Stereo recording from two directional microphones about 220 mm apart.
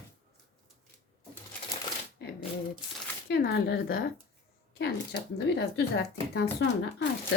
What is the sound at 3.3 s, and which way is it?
Speech, 50° left (ahead or behind).